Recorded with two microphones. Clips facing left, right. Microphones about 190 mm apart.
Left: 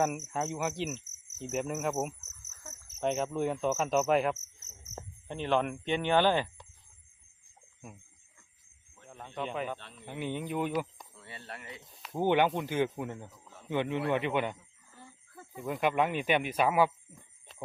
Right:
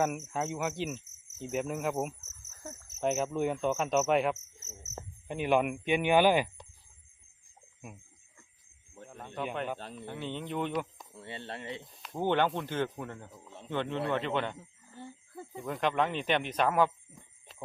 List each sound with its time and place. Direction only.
0.0 s speech: centre (ahead or behind)
5.3 s speech: 10° right (ahead or behind)
9.0 s speech: 5° right (ahead or behind)
9.7 s speech: 40° right (ahead or behind)
10.1 s speech: 10° left (ahead or behind)
11.1 s speech: 25° right (ahead or behind)
11.9 s speech: centre (ahead or behind)
12.2 s speech: 10° left (ahead or behind)
13.3 s a sound: 25° right (ahead or behind)
13.7 s speech: 15° left (ahead or behind)
14.6 s a sound: 30° right (ahead or behind)
15.6 s speech: 10° left (ahead or behind)